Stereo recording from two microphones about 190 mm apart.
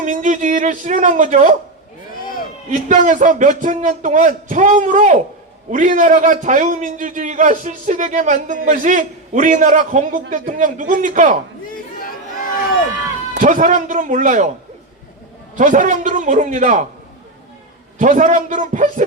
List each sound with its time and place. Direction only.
0.0 s a sound: 40° right (ahead or behind)
2.9 s a man's voice: 40° right (ahead or behind)
11.9 s chatter: 50° left (ahead or behind)
13.3 s a man's voice: 40° right (ahead or behind)
15.5 s a man's voice: 45° right (ahead or behind)
18.0 s a man's voice: 40° right (ahead or behind)